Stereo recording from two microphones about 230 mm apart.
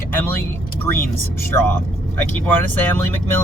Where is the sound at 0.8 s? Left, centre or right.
Centre.